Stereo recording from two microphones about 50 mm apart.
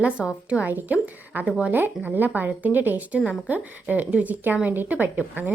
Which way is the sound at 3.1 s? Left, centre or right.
Right.